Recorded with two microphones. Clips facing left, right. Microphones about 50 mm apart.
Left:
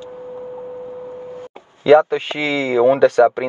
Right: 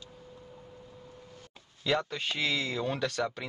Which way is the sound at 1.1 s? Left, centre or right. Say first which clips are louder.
Left 19 dB; left.